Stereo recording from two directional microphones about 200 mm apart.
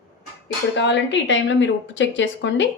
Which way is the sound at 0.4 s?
65° left (ahead or behind).